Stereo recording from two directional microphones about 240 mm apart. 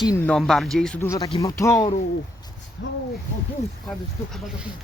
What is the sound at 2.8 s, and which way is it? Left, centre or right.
Speech, left.